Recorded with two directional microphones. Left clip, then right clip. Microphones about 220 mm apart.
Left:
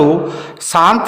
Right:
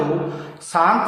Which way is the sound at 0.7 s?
60° left (ahead or behind).